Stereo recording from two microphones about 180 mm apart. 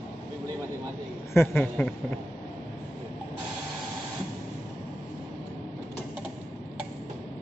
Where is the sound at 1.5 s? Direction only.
10° left (ahead or behind).